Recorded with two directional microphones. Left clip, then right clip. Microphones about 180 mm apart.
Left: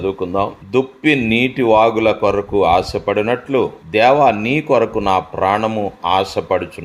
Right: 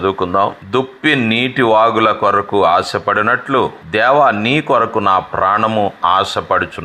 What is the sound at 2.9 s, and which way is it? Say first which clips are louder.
Speech: right 3 dB; 40° right (ahead or behind).